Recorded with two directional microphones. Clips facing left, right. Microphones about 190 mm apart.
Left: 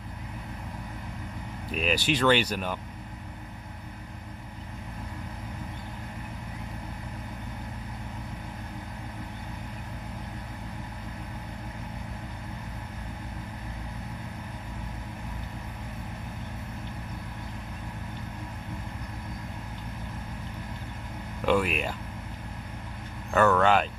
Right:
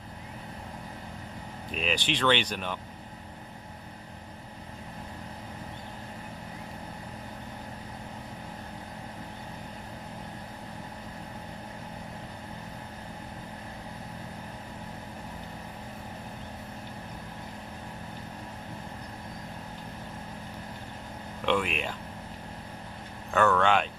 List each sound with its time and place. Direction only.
1.7 s speech: 5° left (ahead or behind)
21.4 s vehicle: 5° left (ahead or behind)
23.3 s vehicle: 5° left (ahead or behind)